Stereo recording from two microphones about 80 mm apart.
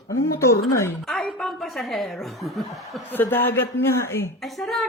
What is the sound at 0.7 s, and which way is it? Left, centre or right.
Speech, left.